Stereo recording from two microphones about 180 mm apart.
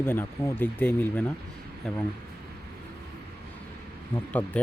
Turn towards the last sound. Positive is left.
turn(degrees=10)  # may be behind; listen again after turning